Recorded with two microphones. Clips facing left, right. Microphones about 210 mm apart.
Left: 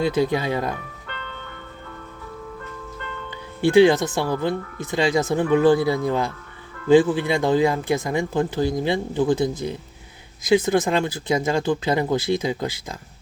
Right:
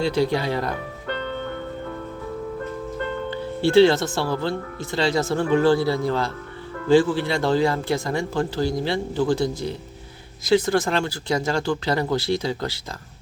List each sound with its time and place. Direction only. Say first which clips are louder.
0.0 s speech: left 1 dB; 15° left (ahead or behind)
1.0 s music: right 9 dB; 40° right (ahead or behind)
3.6 s speech: left 1 dB; 15° left (ahead or behind)